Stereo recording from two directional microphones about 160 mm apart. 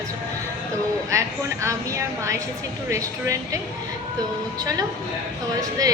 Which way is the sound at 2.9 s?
20° right (ahead or behind).